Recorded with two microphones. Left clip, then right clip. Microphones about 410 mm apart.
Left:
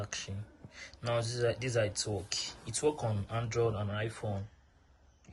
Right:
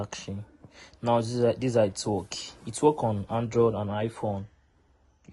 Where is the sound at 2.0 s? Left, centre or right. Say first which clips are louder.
Right 5 dB; centre.